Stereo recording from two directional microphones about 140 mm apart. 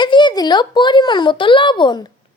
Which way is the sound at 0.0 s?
35° left (ahead or behind).